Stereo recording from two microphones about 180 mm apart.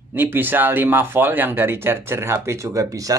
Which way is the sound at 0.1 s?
10° right (ahead or behind).